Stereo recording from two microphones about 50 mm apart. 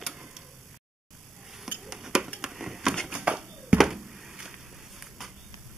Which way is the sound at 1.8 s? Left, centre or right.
Centre.